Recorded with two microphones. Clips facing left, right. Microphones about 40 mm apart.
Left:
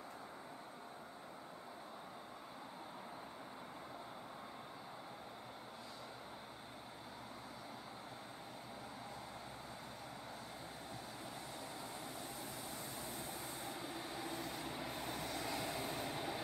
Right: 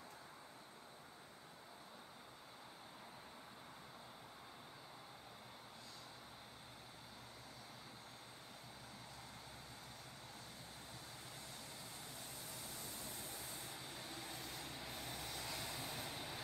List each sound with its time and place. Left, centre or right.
13.6 s vehicle: centre